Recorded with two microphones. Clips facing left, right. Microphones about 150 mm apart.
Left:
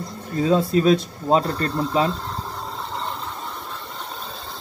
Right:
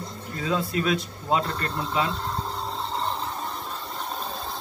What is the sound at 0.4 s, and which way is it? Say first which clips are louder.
Speech: left 8 dB; 35° left (ahead or behind).